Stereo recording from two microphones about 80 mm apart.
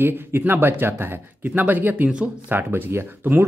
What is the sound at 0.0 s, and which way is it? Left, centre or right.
Speech, right.